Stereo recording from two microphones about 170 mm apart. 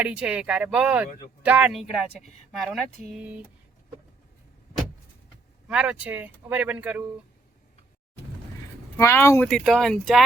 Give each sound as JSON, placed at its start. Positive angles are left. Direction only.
{"t": 0.0, "sound": "speech", "side_deg": -5}
{"t": 5.6, "sound": "speech", "side_deg": -5}
{"t": 9.0, "sound": "speech", "side_deg": 15}
{"t": 9.4, "sound": "speech", "side_deg": 5}